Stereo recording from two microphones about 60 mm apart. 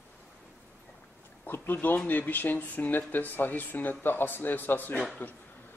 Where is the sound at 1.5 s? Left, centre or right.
Left.